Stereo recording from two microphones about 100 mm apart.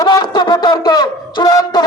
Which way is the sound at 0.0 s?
45° left (ahead or behind).